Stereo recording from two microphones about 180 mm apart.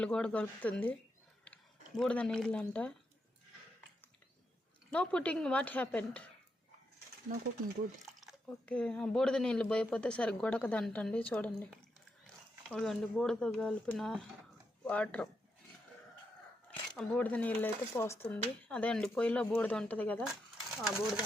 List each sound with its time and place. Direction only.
0.0 s speech: 5° left (ahead or behind)
1.5 s a sound: 10° left (ahead or behind)
2.0 s speech: 5° left (ahead or behind)
4.9 s speech: 5° left (ahead or behind)
7.3 s speech: 50° right (ahead or behind)
8.2 s speech: 5° left (ahead or behind)
11.7 s a sound: 5° left (ahead or behind)
12.7 s speech: centre (ahead or behind)
17.0 s speech: 10° left (ahead or behind)